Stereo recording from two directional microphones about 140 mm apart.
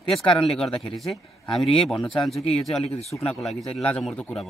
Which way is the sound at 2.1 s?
Centre (ahead or behind).